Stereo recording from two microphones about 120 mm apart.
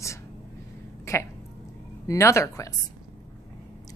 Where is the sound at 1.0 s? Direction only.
25° left (ahead or behind).